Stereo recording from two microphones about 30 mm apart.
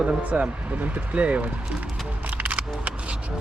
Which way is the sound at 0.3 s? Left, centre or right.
Right.